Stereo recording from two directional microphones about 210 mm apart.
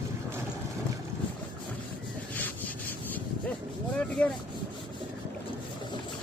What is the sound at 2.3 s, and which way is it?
Rub, 10° left (ahead or behind).